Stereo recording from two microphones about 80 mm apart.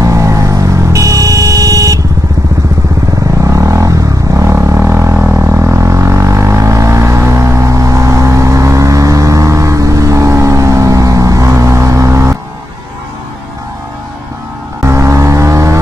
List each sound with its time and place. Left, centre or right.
0.0 s vehicle: right
3.4 s a sound: right
5.1 s didgeridoo: right
5.4 s vehicle: right
14.8 s vehicle: right